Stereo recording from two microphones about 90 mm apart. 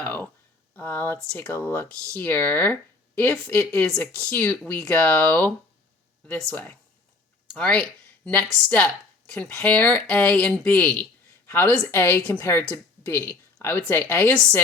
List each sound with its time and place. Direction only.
0.0 s a sound: 20° left (ahead or behind)
0.8 s speech: 20° left (ahead or behind)
3.7 s a woman's voice: 10° left (ahead or behind)